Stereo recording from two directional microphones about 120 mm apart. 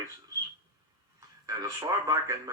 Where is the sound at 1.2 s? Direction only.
30° right (ahead or behind).